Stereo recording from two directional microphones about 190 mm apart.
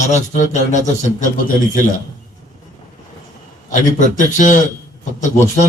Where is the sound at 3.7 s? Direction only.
40° left (ahead or behind).